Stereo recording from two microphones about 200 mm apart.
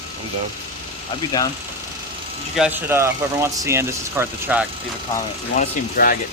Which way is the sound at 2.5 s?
5° right (ahead or behind).